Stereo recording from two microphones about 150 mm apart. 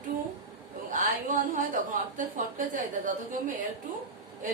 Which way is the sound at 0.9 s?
60° right (ahead or behind).